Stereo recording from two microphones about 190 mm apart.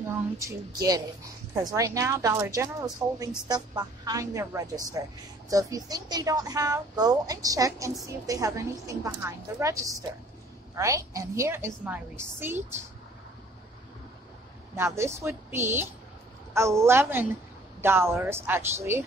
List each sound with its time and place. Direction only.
0.4 s a woman's voice: 15° right (ahead or behind)
14.8 s speech: 15° right (ahead or behind)